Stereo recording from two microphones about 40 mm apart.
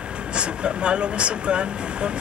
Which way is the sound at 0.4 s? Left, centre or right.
Right.